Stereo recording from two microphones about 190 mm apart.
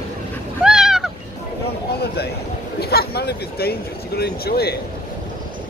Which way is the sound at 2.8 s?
55° left (ahead or behind).